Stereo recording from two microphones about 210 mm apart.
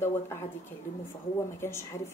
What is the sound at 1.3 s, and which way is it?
Speech, 10° left (ahead or behind).